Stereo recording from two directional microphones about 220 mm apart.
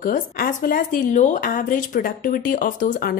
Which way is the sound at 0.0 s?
40° left (ahead or behind).